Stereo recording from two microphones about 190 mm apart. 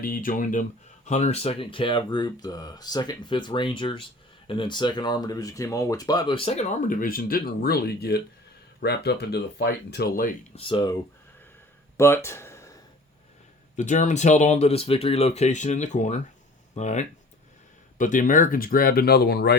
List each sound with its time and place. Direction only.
0.0 s speech: 45° left (ahead or behind)
10.5 s speech: 30° left (ahead or behind)
11.9 s a sound: 15° left (ahead or behind)
13.7 s speech: 40° left (ahead or behind); by 19.5 s 60° left (ahead or behind)